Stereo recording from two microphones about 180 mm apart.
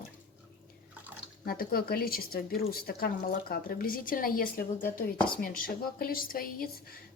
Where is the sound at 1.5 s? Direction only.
55° left (ahead or behind).